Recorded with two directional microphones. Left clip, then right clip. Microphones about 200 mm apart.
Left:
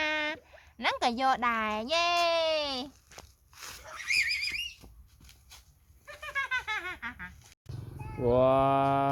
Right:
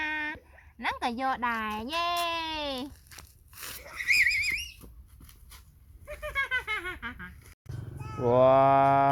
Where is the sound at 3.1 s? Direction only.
40° right (ahead or behind).